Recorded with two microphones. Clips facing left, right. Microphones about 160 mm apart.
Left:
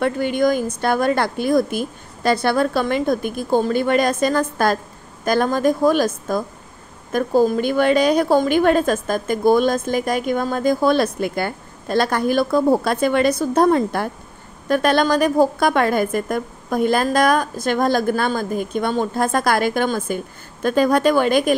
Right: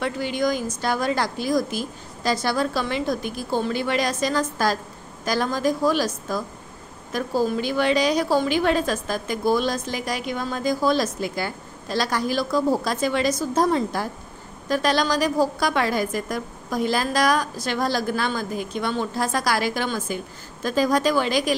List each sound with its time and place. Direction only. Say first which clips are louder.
0.0 s a woman's voice: left 6 dB; 55° left (ahead or behind)